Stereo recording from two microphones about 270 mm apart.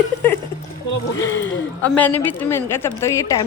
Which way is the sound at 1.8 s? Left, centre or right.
Centre.